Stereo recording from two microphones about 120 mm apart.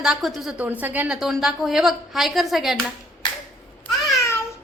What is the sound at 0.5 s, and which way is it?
Speech, 15° right (ahead or behind).